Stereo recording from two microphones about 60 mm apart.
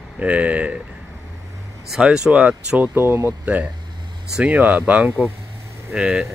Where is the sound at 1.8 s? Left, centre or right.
Centre.